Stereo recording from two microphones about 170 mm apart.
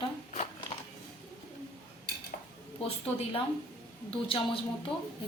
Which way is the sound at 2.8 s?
35° left (ahead or behind).